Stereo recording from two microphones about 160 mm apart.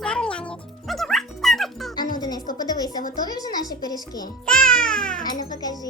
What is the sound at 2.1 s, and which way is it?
Music, 25° left (ahead or behind).